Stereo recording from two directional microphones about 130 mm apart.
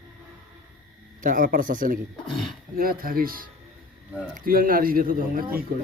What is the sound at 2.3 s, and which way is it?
Speech, centre (ahead or behind).